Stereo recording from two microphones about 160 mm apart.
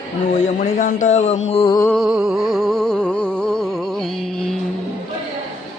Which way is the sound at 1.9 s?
Centre (ahead or behind).